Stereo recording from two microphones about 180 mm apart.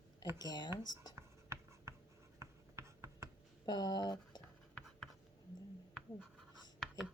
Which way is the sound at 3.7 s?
25° left (ahead or behind).